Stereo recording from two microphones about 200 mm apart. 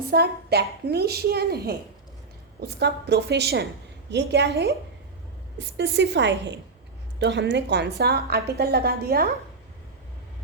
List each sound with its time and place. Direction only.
0.1 s a woman's voice: 55° right (ahead or behind)